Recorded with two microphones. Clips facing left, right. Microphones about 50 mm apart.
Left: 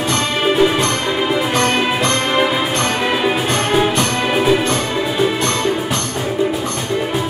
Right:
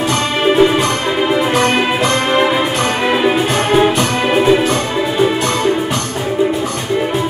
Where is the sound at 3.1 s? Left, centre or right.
Centre.